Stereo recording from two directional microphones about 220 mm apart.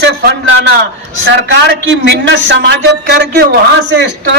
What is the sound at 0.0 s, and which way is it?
A man's voice, 50° right (ahead or behind).